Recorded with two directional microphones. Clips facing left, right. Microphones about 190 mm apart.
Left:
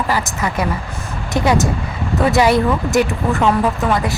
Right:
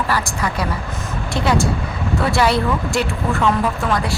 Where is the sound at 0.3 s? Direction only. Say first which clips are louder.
Left 2 dB; 20° left (ahead or behind).